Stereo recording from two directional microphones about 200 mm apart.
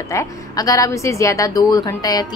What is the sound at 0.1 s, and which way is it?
A woman's voice, 15° left (ahead or behind).